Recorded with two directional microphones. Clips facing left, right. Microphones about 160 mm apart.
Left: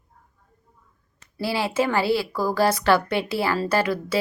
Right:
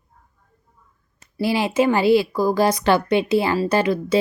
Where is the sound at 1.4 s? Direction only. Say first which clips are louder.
Right 5 dB; 15° right (ahead or behind).